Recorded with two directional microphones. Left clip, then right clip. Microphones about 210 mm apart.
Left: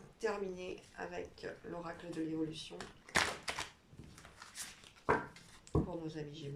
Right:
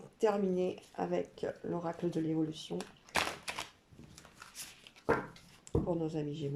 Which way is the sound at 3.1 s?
10° right (ahead or behind).